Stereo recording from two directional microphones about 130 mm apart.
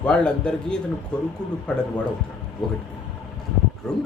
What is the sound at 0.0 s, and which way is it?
A man's voice, 10° left (ahead or behind).